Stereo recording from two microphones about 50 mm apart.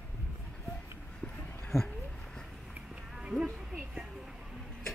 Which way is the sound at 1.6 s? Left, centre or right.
Centre.